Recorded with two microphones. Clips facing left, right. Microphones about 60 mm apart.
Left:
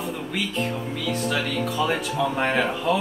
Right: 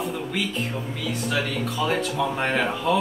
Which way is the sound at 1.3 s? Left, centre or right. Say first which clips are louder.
Left 1 dB; centre.